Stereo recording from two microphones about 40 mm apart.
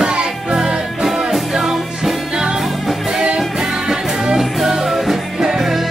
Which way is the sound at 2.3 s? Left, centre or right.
Centre.